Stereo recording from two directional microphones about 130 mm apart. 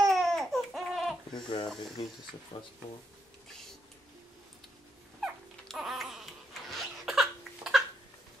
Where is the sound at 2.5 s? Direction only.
45° left (ahead or behind).